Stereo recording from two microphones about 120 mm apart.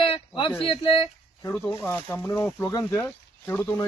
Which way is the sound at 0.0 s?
45° left (ahead or behind).